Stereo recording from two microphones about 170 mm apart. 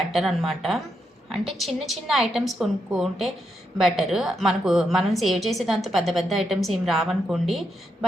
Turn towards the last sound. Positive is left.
turn(degrees=0)  # may be behind; listen again after turning